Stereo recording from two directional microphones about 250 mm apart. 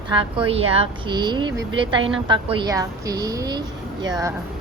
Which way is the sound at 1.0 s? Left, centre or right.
Centre.